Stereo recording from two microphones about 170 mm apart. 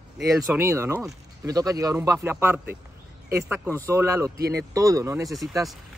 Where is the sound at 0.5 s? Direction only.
15° right (ahead or behind).